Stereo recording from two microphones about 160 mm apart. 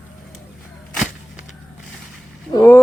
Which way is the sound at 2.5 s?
15° left (ahead or behind).